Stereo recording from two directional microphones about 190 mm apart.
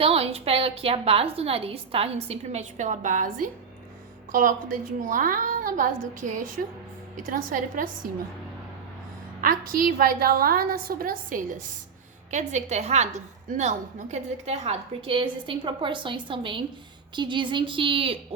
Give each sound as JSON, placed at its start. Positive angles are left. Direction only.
{"t": 0.0, "sound": "a woman's voice", "side_deg": -30}
{"t": 9.4, "sound": "a woman's voice", "side_deg": -50}